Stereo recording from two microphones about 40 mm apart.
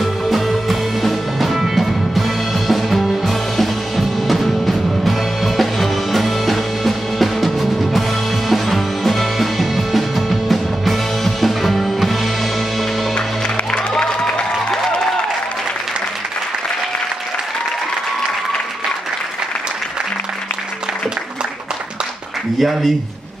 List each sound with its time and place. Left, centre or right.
0.0 s music: centre
13.7 s music: centre
22.6 s a sound: centre